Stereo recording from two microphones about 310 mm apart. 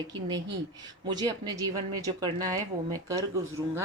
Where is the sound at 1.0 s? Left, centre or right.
Centre.